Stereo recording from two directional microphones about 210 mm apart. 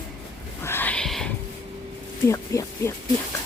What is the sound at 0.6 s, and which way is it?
Whispering, 10° left (ahead or behind).